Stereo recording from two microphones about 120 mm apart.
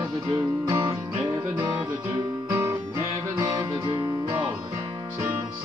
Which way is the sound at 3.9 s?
40° right (ahead or behind).